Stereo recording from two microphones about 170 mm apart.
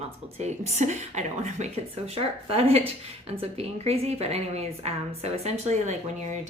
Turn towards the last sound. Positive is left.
turn(degrees=-45)  # may be behind; listen again after turning